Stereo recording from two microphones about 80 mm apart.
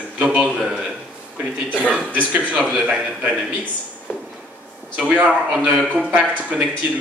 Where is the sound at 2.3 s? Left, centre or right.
Centre.